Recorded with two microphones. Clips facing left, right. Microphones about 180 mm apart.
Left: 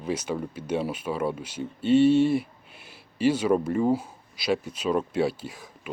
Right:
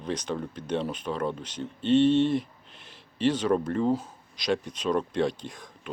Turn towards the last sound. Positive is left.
turn(degrees=5)  # may be behind; listen again after turning